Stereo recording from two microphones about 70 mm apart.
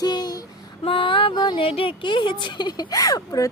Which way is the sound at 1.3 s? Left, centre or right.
Left.